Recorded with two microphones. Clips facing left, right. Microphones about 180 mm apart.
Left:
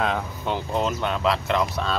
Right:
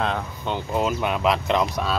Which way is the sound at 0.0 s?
Centre (ahead or behind).